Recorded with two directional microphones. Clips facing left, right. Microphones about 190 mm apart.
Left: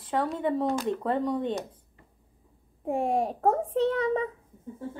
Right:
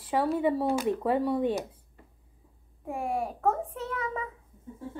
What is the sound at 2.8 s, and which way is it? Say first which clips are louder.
A child's voice: left 5 dB; 30° left (ahead or behind).